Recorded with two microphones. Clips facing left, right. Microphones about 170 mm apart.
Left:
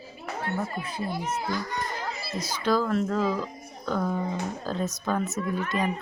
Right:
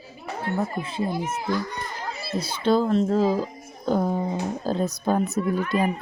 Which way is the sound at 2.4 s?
30° right (ahead or behind).